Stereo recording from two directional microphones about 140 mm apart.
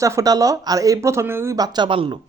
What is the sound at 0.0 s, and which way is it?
Speech, 25° right (ahead or behind).